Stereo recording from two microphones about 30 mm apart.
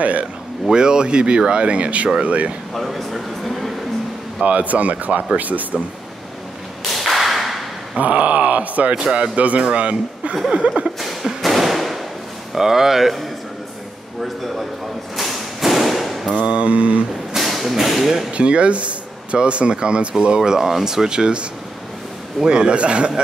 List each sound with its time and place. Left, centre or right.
0.0 s speech: right
0.7 s speech: right
2.7 s speech: centre
4.5 s speech: right
6.9 s whip: centre
8.0 s groan: right
9.0 s speech: right
11.4 s fireworks: centre
12.5 s speech: centre
15.1 s thump: centre
16.3 s speech: right
17.4 s thump: centre
18.3 s speech: right
20.2 s speech: right